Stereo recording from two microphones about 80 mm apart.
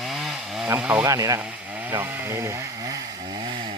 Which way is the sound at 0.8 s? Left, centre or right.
Centre.